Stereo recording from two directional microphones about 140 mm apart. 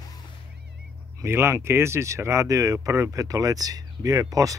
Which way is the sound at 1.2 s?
20° right (ahead or behind).